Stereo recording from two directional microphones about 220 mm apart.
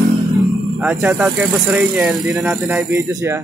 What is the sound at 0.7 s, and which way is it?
Speech, centre (ahead or behind).